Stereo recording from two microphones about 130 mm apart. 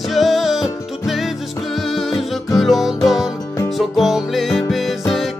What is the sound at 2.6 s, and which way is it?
Music, centre (ahead or behind).